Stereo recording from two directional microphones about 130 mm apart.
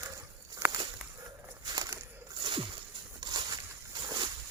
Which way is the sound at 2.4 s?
40° right (ahead or behind).